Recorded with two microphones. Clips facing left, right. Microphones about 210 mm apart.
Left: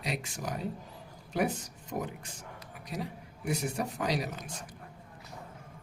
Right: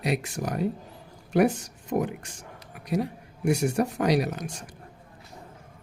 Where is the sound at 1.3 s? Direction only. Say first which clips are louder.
Right 9 dB; 75° right (ahead or behind).